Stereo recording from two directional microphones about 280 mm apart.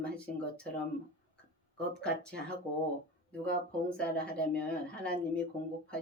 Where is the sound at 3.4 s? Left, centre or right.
Centre.